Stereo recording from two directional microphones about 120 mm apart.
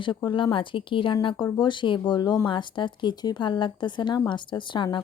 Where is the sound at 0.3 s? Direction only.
40° left (ahead or behind).